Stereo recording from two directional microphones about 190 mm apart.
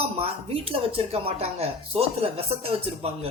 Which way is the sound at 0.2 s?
30° right (ahead or behind).